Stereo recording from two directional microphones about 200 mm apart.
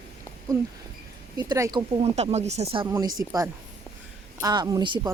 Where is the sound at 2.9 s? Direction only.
15° right (ahead or behind).